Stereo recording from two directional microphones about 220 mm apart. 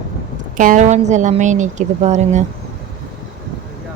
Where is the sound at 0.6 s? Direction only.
35° right (ahead or behind).